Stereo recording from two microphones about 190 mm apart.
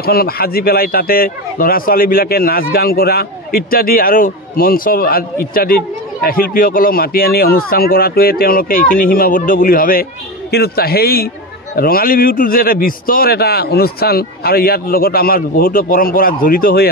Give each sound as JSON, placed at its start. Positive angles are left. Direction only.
{"t": 0.0, "sound": "a man's voice", "side_deg": 55}